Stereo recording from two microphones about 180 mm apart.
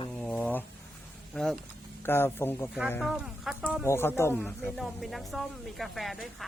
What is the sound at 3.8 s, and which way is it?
Speech, 15° left (ahead or behind).